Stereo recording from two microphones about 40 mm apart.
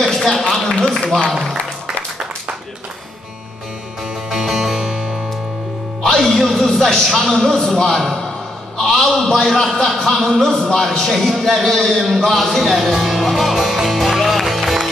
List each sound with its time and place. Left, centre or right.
0.1 s a sound: centre
0.5 s a man's voice: centre
1.3 s a sound: centre
4.3 s music: centre
6.0 s a man's voice: centre
12.8 s music: centre